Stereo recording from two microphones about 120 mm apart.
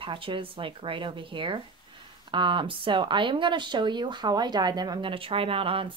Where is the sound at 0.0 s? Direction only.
45° right (ahead or behind).